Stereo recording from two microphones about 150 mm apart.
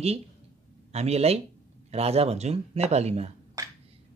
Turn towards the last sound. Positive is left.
turn(degrees=-20)  # may be behind; listen again after turning